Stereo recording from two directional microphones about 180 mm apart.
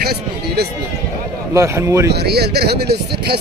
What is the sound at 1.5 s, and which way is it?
Speech, 15° right (ahead or behind).